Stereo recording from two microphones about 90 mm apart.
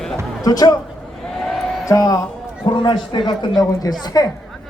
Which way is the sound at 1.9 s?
40° left (ahead or behind).